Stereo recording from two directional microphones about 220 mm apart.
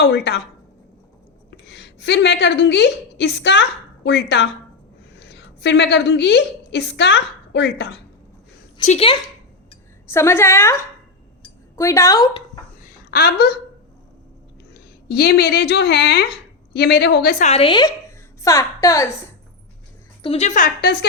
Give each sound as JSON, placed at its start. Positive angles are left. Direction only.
{"t": 0.0, "sound": "a woman's voice", "side_deg": 50}
{"t": 1.5, "sound": "a woman's voice", "side_deg": 50}
{"t": 8.8, "sound": "a woman's voice", "side_deg": 30}
{"t": 10.1, "sound": "a woman's voice", "side_deg": 10}
{"t": 13.1, "sound": "a woman's voice", "side_deg": 45}
{"t": 14.7, "sound": "a woman's voice", "side_deg": 50}
{"t": 17.4, "sound": "a woman's voice", "side_deg": 25}
{"t": 20.2, "sound": "speech", "side_deg": 30}